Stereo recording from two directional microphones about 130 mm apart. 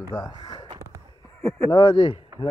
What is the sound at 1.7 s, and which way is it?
Speech, 40° left (ahead or behind).